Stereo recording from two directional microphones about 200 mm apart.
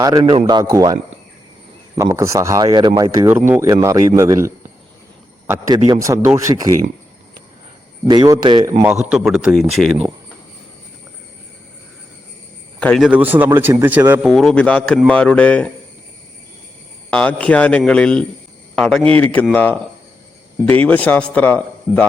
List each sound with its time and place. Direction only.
0.0 s speech: 20° right (ahead or behind)
2.0 s speech: 15° right (ahead or behind)
3.2 s speech: 10° right (ahead or behind)
8.0 s speech: 20° right (ahead or behind)
8.8 s speech: 5° right (ahead or behind)
12.8 s speech: 5° left (ahead or behind)
13.1 s speech: 10° right (ahead or behind)
17.1 s speech: 5° left (ahead or behind)